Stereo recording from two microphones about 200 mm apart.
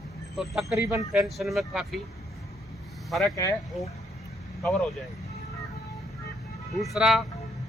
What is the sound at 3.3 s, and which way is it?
Speech, 15° left (ahead or behind).